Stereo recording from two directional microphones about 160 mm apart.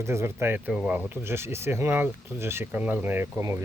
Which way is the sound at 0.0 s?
15° right (ahead or behind).